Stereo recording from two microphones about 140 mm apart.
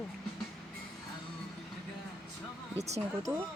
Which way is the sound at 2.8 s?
50° right (ahead or behind).